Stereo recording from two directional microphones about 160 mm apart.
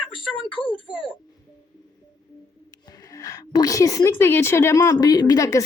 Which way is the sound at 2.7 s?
20° left (ahead or behind).